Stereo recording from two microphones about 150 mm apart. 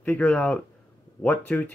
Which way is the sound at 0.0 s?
10° left (ahead or behind).